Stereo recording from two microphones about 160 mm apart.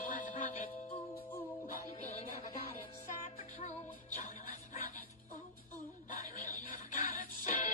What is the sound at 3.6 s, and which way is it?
Music, 55° left (ahead or behind).